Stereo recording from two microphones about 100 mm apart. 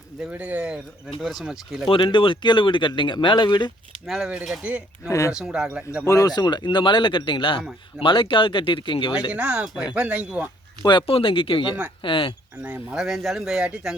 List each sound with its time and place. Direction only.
0.3 s speech: 15° right (ahead or behind)
1.9 s speech: 60° left (ahead or behind)
4.0 s speech: centre (ahead or behind)
5.0 s speech: 30° left (ahead or behind)
5.3 s speech: 5° right (ahead or behind)
6.1 s speech: 35° left (ahead or behind); by 9.1 s 55° left (ahead or behind)
9.3 s speech: 10° right (ahead or behind)
11.0 s speech: 65° left (ahead or behind)
12.6 s speech: 10° right (ahead or behind)